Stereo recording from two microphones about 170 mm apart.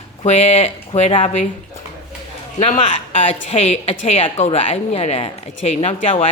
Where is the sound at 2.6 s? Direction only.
45° left (ahead or behind).